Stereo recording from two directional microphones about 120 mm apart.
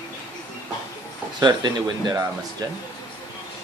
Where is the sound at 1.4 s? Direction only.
35° right (ahead or behind).